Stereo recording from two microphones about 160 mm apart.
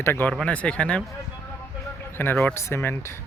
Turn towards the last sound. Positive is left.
turn(degrees=15)  # may be behind; listen again after turning